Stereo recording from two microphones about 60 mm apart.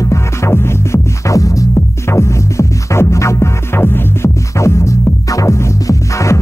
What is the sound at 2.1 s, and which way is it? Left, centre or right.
Music, left.